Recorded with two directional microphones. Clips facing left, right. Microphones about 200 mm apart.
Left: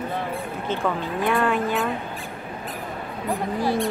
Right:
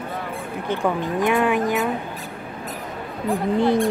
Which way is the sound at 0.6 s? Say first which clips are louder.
Right 3 dB; 15° right (ahead or behind).